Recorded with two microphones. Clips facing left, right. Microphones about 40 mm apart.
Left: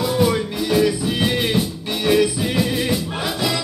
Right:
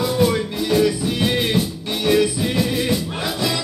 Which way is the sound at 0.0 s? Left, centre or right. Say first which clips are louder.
Even; centre.